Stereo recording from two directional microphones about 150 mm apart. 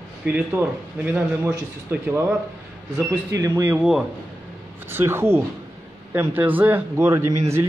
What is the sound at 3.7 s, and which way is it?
Speech, 5° right (ahead or behind).